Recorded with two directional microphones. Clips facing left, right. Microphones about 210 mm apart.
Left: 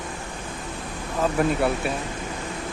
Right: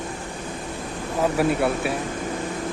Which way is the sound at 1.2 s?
5° right (ahead or behind).